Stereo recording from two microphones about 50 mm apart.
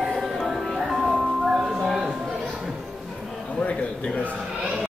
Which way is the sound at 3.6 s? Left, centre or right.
Left.